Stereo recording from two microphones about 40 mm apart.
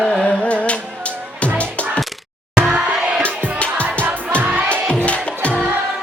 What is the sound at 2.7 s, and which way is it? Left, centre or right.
Crowd, right.